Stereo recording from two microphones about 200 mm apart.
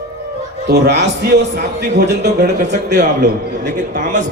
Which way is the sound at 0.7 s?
55° right (ahead or behind).